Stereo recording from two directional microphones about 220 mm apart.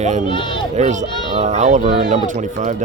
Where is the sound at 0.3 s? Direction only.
20° left (ahead or behind).